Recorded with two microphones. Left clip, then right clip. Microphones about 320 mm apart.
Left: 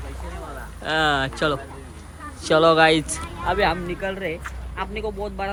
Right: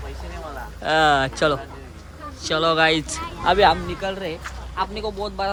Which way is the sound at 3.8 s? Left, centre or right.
Centre.